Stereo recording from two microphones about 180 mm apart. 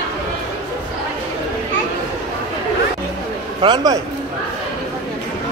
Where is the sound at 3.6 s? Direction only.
20° right (ahead or behind).